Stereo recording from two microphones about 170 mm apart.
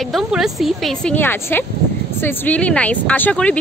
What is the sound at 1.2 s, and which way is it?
Speech, 10° left (ahead or behind).